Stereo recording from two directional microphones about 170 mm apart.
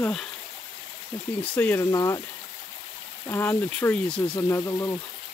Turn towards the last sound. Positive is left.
turn(degrees=15)  # may be behind; listen again after turning